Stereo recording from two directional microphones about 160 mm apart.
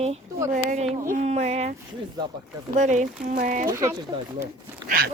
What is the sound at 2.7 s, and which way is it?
Speech, 50° right (ahead or behind).